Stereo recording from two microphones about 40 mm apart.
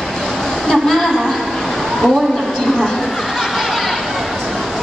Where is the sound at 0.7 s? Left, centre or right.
Centre.